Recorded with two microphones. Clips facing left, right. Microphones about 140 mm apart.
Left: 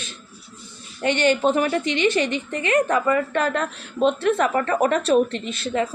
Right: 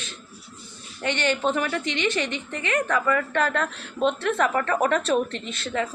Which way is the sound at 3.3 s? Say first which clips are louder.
Left 2 dB; 15° left (ahead or behind).